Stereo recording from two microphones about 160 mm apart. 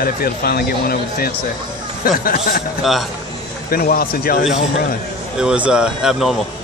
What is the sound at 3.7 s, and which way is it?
Speech, 65° left (ahead or behind).